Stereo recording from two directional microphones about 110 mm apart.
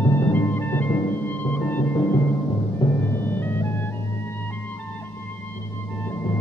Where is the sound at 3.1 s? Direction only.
20° left (ahead or behind).